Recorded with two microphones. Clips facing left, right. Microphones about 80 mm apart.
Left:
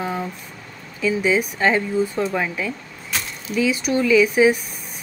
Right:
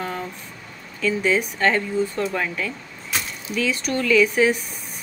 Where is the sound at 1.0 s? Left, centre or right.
Centre.